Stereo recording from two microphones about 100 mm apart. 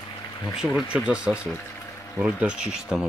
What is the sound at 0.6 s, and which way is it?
Speech, centre (ahead or behind).